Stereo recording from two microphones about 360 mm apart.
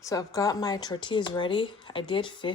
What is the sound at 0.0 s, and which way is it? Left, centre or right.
Speech, centre.